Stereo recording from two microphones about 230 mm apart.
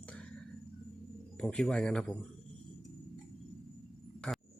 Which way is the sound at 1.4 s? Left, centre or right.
Centre.